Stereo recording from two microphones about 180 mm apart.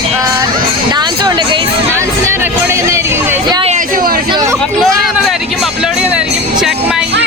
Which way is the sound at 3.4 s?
25° right (ahead or behind).